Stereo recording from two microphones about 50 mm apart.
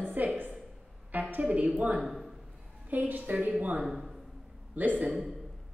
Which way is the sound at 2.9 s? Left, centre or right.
Right.